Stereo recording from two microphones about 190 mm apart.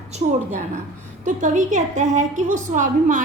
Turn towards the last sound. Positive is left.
turn(degrees=-40)  # may be behind; listen again after turning